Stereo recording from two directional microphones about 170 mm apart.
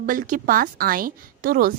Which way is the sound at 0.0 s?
55° right (ahead or behind).